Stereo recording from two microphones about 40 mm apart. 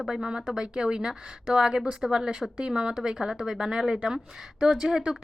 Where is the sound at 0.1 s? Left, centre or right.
Centre.